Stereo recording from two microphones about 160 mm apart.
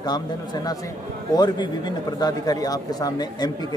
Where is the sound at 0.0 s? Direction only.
25° left (ahead or behind).